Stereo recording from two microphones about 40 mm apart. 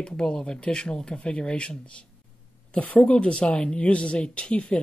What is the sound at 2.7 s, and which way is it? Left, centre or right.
A man's voice, left.